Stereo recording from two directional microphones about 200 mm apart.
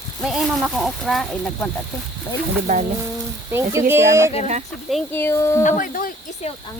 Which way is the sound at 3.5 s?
10° right (ahead or behind).